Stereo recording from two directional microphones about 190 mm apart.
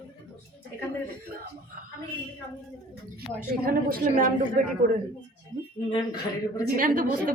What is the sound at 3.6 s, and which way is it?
A woman's voice, 50° right (ahead or behind).